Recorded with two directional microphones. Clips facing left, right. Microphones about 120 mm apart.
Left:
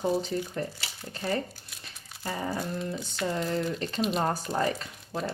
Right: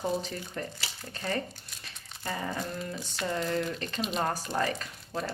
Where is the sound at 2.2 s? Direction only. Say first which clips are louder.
Left 2 dB; 15° left (ahead or behind).